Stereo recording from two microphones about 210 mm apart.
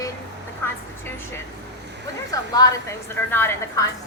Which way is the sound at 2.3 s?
15° left (ahead or behind).